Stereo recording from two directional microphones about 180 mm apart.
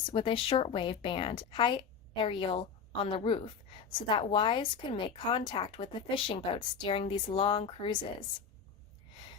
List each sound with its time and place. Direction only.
0.0 s a woman's voice: 30° left (ahead or behind)